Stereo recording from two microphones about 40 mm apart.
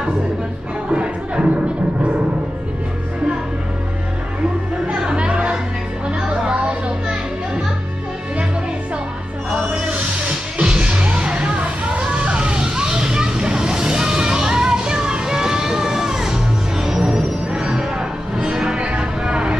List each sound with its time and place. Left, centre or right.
0.9 s a sound: right
4.8 s music: right
10.6 s music: right